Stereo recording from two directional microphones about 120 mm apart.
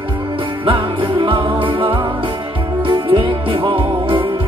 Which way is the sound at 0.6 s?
45° right (ahead or behind).